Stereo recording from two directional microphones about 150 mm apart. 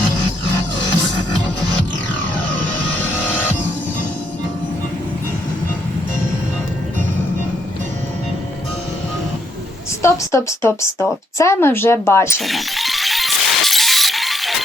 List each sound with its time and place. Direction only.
10.0 s speech: 20° left (ahead or behind)
12.4 s music: centre (ahead or behind)